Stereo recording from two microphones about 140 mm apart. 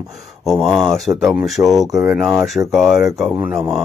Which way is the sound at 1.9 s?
20° right (ahead or behind).